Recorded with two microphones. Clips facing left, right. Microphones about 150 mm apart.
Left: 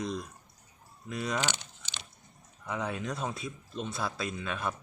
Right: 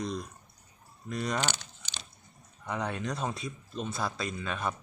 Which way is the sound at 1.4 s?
20° left (ahead or behind).